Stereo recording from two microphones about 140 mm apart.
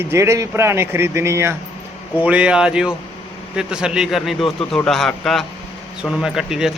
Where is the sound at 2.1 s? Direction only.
10° right (ahead or behind).